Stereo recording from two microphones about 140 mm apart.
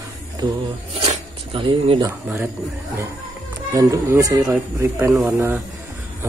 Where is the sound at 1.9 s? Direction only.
20° right (ahead or behind).